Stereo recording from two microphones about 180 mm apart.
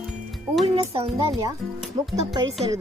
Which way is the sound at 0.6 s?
30° right (ahead or behind).